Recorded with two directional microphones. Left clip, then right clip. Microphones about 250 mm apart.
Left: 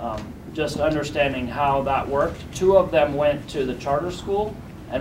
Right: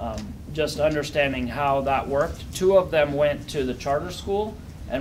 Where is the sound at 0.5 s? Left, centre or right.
Right.